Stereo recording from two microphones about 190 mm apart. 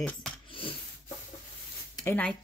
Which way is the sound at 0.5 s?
25° left (ahead or behind).